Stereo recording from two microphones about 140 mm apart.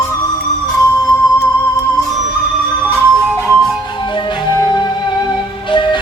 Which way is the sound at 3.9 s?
35° left (ahead or behind).